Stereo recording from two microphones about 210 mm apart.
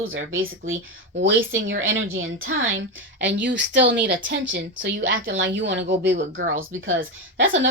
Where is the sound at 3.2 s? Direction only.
60° right (ahead or behind).